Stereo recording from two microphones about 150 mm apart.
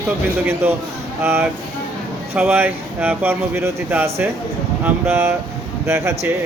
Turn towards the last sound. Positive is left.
turn(degrees=-20)  # may be behind; listen again after turning